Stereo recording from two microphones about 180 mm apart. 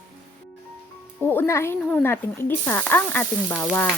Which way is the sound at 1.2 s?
10° left (ahead or behind).